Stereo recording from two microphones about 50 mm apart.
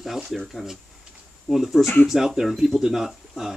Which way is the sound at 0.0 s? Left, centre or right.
Centre.